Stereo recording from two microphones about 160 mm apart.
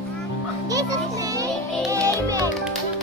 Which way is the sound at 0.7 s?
20° right (ahead or behind).